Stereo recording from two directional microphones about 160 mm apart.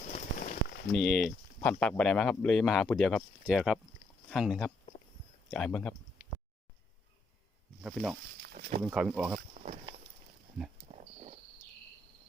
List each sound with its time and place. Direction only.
0.1 s a sound: 55° left (ahead or behind)
0.9 s speech: centre (ahead or behind)
7.8 s speech: 5° right (ahead or behind)
10.6 s speech: centre (ahead or behind)